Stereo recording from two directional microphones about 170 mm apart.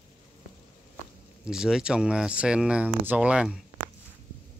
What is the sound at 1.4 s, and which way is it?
Speech, 5° right (ahead or behind).